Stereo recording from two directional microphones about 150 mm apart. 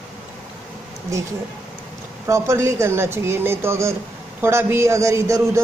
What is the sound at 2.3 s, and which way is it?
A man's voice, 20° right (ahead or behind).